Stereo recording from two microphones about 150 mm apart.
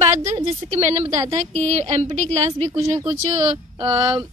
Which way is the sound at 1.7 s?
45° right (ahead or behind).